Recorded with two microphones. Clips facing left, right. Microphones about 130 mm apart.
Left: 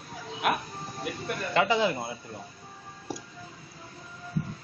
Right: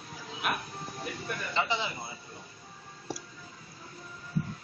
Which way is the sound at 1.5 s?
50° left (ahead or behind).